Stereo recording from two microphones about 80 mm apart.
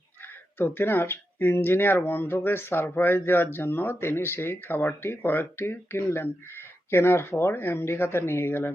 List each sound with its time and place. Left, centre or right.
0.6 s speech: left